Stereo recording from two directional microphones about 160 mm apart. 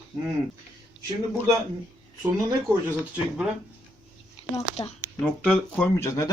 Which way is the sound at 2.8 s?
10° right (ahead or behind).